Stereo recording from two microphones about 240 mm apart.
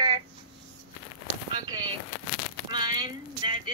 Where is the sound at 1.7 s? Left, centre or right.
Centre.